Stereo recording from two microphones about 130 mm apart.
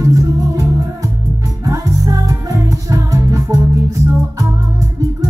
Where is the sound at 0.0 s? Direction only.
25° right (ahead or behind).